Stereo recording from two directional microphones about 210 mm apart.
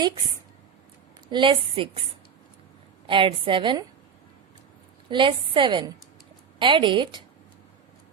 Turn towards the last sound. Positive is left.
turn(degrees=-20)  # may be behind; listen again after turning